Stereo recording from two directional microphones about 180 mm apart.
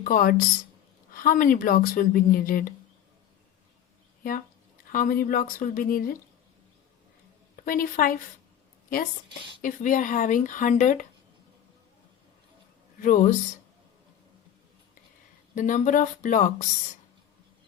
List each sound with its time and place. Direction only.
0.0 s speech: 50° left (ahead or behind)
4.2 s speech: 50° left (ahead or behind)
7.5 s a woman's voice: 50° left (ahead or behind)
9.6 s speech: 45° left (ahead or behind)
13.0 s speech: 45° left (ahead or behind)
15.5 s speech: 45° left (ahead or behind)